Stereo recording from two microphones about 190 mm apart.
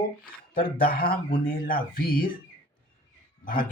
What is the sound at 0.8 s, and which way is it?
Speech, 50° left (ahead or behind).